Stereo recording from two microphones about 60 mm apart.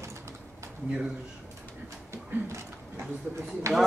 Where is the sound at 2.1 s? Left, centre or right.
Right.